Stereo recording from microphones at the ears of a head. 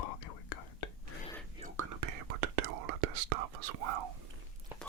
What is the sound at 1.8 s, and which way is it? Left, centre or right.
Whispering, right.